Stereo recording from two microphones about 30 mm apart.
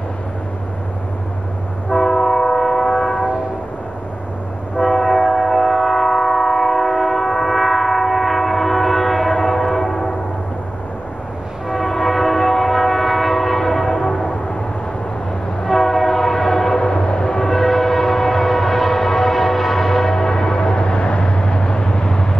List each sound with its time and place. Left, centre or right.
2.0 s train: centre
4.8 s train: centre
11.7 s train: centre
13.9 s train: left
15.7 s train: centre
16.7 s train: left
17.6 s train: centre
20.2 s train: left